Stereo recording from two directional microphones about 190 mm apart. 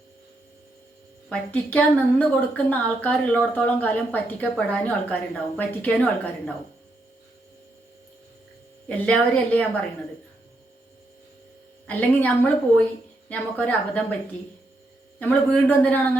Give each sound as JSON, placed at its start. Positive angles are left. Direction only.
{"t": 1.3, "sound": "speech", "side_deg": 10}
{"t": 8.9, "sound": "speech", "side_deg": 5}
{"t": 11.9, "sound": "speech", "side_deg": 10}
{"t": 15.2, "sound": "speech", "side_deg": 10}